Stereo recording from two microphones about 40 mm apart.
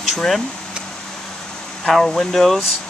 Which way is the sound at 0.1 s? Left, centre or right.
Centre.